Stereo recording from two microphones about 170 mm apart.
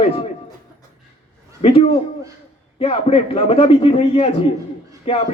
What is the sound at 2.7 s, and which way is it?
Speech, 35° left (ahead or behind).